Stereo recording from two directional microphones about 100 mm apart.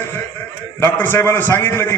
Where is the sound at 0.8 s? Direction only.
20° left (ahead or behind).